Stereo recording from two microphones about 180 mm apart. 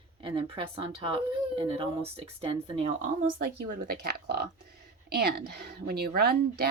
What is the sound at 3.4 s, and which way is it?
Speech, 60° right (ahead or behind).